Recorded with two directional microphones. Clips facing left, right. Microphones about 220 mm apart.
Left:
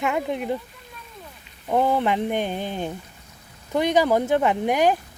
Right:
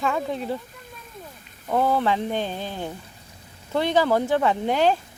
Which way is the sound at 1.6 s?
15° left (ahead or behind).